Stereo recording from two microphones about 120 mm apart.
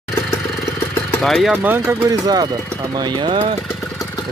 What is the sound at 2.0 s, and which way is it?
Speech, 35° right (ahead or behind).